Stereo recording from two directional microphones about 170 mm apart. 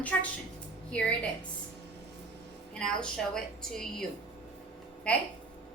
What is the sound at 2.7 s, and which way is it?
A woman's voice, 5° left (ahead or behind).